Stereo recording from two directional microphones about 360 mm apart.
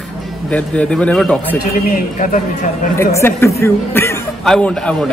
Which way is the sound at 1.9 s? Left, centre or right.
Left.